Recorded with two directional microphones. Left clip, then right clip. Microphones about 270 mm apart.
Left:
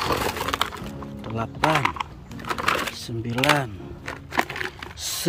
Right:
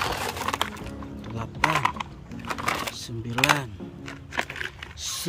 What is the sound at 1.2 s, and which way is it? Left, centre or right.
Music, centre.